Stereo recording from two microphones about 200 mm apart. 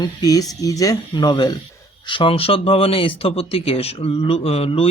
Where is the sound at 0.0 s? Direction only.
20° left (ahead or behind).